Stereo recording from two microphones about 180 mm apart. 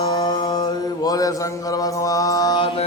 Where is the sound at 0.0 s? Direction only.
20° left (ahead or behind).